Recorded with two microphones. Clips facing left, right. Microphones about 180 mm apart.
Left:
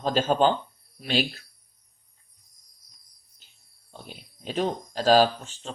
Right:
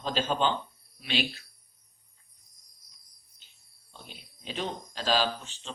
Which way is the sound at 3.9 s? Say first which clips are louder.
Left 6 dB; 45° left (ahead or behind).